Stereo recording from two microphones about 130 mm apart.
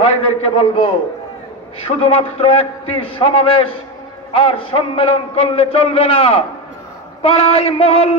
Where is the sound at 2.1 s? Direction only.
45° left (ahead or behind).